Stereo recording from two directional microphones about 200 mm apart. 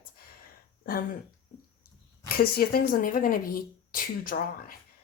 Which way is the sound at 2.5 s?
45° left (ahead or behind).